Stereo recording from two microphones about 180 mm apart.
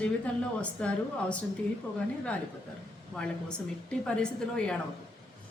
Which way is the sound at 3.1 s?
5° left (ahead or behind).